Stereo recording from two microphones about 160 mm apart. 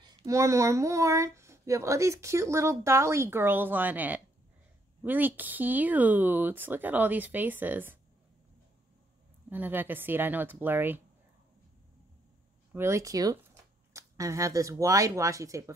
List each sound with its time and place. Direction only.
0.2 s speech: 20° right (ahead or behind)
9.5 s speech: 10° right (ahead or behind)
12.7 s speech: 15° right (ahead or behind)